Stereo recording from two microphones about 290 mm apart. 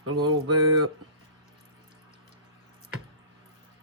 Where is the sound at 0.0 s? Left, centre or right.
Right.